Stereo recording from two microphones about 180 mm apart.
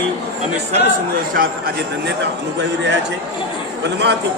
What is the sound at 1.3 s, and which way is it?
Speech, 55° right (ahead or behind).